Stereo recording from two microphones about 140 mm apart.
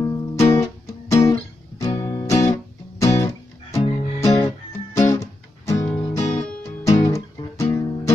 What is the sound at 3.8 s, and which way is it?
Music, 50° left (ahead or behind).